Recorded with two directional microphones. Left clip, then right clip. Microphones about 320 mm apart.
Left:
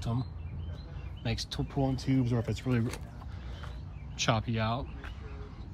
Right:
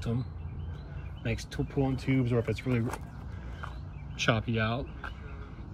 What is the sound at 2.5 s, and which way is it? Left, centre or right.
Speech, left.